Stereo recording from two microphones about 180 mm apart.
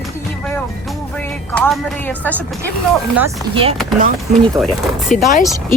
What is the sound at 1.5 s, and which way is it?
Speech, 10° left (ahead or behind).